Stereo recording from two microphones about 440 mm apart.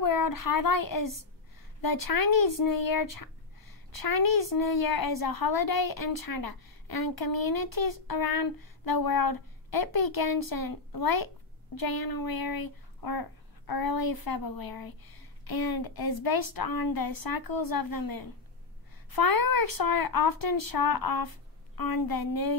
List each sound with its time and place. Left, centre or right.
0.0 s speech: left